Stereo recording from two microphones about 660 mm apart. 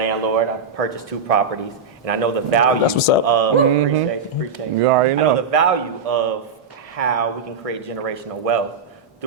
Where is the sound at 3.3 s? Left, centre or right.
Right.